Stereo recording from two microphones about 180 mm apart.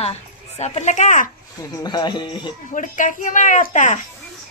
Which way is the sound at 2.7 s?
45° left (ahead or behind).